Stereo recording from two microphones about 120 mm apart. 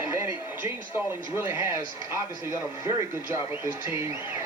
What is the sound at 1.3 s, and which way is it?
Speech, 20° right (ahead or behind).